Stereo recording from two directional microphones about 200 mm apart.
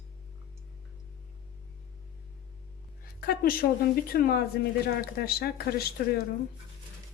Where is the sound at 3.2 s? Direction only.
50° left (ahead or behind).